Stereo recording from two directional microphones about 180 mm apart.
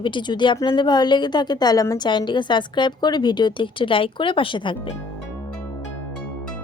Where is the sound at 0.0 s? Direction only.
25° left (ahead or behind).